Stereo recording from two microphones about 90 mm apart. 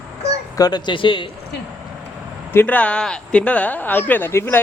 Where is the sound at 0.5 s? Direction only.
50° left (ahead or behind); by 1.2 s 65° left (ahead or behind).